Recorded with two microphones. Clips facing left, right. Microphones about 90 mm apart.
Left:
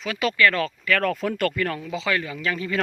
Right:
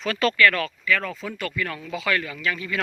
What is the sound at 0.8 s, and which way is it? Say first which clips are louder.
Speech: left 5 dB; 55° left (ahead or behind).